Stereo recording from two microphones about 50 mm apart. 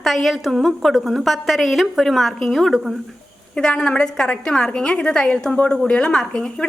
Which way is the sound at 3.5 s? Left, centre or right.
Left.